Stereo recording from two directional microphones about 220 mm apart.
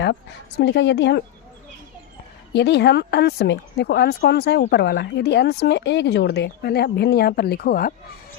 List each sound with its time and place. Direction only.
0.6 s speech: 50° left (ahead or behind)
2.5 s speech: 50° left (ahead or behind)